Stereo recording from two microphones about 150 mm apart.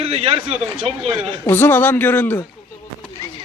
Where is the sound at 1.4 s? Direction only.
15° left (ahead or behind).